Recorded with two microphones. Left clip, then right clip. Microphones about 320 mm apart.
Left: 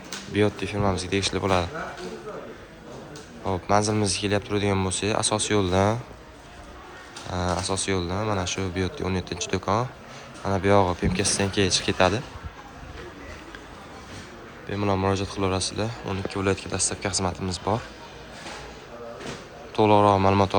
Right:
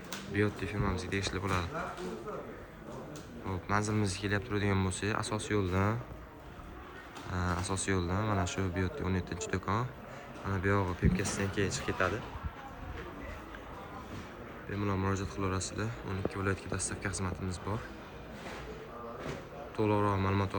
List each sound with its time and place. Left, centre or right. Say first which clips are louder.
0.3 s speech: left 9 dB; centre
3.4 s speech: left 11 dB; centre
7.3 s speech: left 9 dB; centre
14.8 s speech: left 11 dB; centre
19.7 s speech: left 13 dB; centre